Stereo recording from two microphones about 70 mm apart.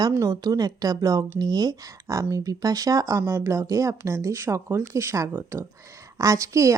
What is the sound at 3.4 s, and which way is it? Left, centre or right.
A woman's voice, right.